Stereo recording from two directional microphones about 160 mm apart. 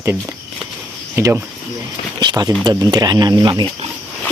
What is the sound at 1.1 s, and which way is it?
Speech, 15° right (ahead or behind).